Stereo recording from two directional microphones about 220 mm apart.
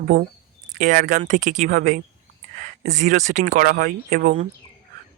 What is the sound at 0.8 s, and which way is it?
Speech, 35° right (ahead or behind).